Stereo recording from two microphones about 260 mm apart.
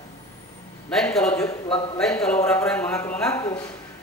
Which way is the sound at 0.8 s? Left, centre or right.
Centre.